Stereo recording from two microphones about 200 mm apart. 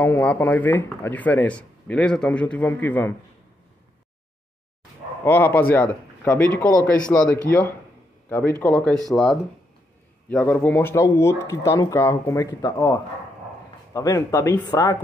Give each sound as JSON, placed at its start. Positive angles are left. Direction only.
{"t": 0.0, "sound": "speech", "side_deg": 10}
{"t": 5.2, "sound": "speech", "side_deg": 10}